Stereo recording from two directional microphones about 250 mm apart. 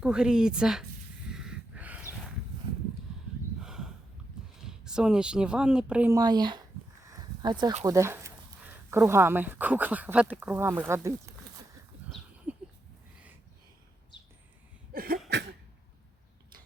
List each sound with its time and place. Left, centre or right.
0.0 s speech: centre
1.3 s snort: centre
3.6 s a sound: centre
4.8 s speech: centre
12.5 s a sound: centre
14.9 s cough: right